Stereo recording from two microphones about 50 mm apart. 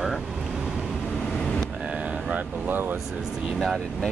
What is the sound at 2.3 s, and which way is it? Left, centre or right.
Speech, right.